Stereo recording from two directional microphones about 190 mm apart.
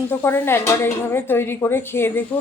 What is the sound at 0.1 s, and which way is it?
Speech, 10° left (ahead or behind).